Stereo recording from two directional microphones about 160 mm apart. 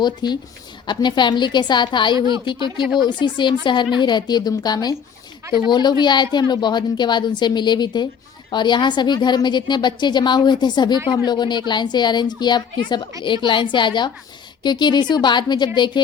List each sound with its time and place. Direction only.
0.0 s a woman's voice: 25° left (ahead or behind)
2.1 s speech: 25° right (ahead or behind)
2.4 s a woman's voice: 30° left (ahead or behind)